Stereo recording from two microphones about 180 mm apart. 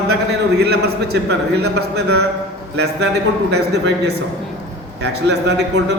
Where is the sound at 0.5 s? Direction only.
65° right (ahead or behind).